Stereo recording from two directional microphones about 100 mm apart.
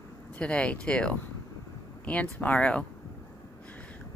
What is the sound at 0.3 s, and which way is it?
Speech, 10° left (ahead or behind).